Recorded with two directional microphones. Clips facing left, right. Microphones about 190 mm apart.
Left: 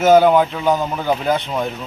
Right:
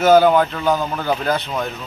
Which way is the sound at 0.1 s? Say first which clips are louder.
Left 1 dB; 5° left (ahead or behind).